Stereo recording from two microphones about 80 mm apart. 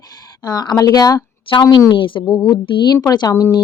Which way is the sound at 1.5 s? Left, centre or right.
Left.